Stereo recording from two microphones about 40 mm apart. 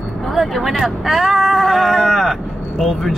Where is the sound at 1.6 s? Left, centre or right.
Centre.